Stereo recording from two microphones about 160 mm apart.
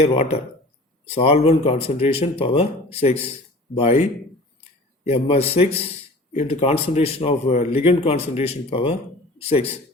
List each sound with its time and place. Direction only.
0.0 s speech: 35° left (ahead or behind)
5.0 s speech: 40° left (ahead or behind)